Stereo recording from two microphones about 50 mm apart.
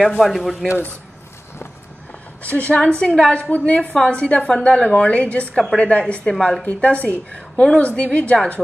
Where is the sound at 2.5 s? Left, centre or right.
Left; by 6.6 s centre.